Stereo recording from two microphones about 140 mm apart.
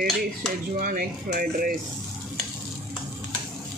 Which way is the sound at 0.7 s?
85° right.